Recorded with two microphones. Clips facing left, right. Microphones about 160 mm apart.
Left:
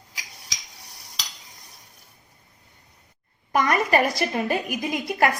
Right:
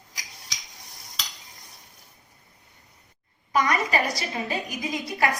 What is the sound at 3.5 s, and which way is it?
A woman's voice, 55° left (ahead or behind).